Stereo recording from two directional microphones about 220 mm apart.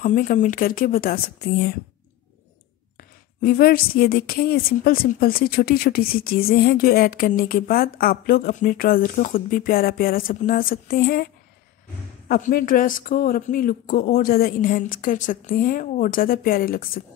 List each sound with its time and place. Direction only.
0.0 s a woman's voice: 35° left (ahead or behind)
3.0 s a woman's voice: 40° left (ahead or behind)
12.3 s a woman's voice: 40° left (ahead or behind)